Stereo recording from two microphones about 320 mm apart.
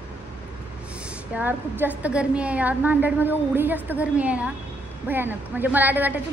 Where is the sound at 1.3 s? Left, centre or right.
Centre.